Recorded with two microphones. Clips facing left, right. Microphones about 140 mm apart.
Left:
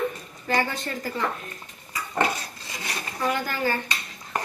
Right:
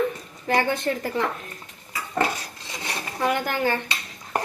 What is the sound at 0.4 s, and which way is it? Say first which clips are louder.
Speech: right 4 dB; 60° right (ahead or behind).